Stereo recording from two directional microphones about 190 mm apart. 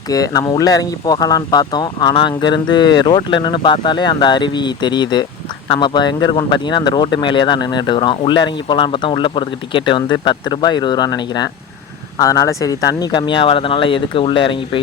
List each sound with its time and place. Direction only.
0.1 s speech: 20° left (ahead or behind)